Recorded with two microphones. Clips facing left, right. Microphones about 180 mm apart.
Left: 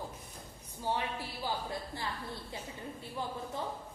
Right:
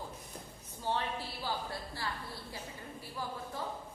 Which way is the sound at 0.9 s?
15° left (ahead or behind).